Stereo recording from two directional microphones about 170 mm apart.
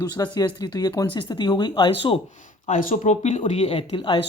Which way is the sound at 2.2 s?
45° left (ahead or behind).